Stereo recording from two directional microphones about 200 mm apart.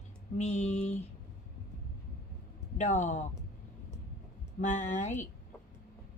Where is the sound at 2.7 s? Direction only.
35° left (ahead or behind).